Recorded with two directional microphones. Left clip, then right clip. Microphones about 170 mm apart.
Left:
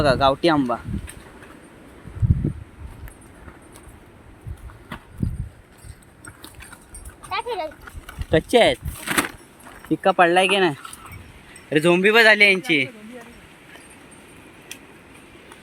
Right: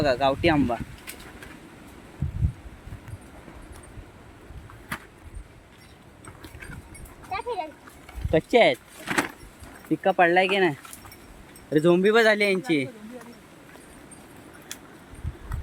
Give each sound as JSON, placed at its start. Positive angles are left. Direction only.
{"t": 0.0, "sound": "speech", "side_deg": 20}
{"t": 7.3, "sound": "dog", "side_deg": 50}
{"t": 8.3, "sound": "speech", "side_deg": 25}
{"t": 9.0, "sound": "vehicle", "side_deg": 65}
{"t": 9.9, "sound": "speech", "side_deg": 20}
{"t": 11.7, "sound": "speech", "side_deg": 0}